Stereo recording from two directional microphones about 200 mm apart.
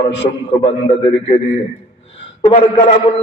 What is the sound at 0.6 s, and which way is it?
Speech, 25° left (ahead or behind).